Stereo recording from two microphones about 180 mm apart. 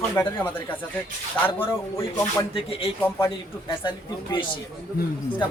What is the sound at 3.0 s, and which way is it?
Speech, 15° left (ahead or behind).